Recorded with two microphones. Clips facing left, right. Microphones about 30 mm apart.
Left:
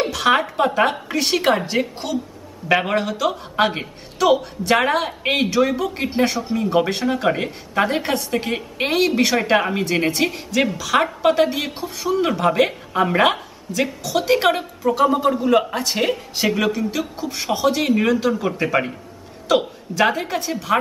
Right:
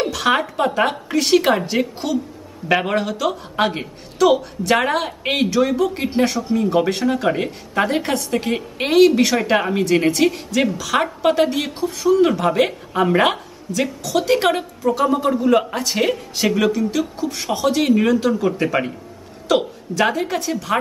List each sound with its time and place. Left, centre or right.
0.1 s a woman's voice: centre
13.7 s a woman's voice: centre